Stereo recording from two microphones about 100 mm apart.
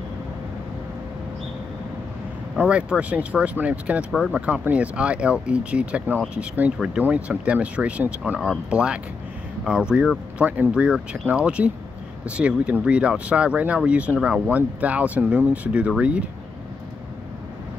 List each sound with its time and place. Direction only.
2.5 s speech: 10° right (ahead or behind)